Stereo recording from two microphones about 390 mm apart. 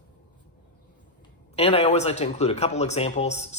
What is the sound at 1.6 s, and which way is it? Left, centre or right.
Speech, centre.